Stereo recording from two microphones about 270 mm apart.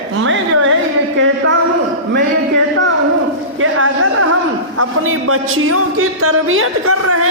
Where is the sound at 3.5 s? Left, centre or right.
Right.